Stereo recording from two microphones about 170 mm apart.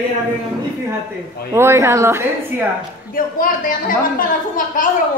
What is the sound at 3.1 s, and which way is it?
A man's voice, 55° left (ahead or behind).